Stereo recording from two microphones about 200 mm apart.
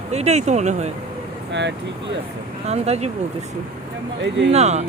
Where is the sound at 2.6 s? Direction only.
35° right (ahead or behind).